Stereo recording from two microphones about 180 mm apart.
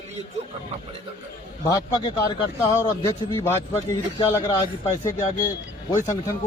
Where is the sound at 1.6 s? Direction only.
25° left (ahead or behind).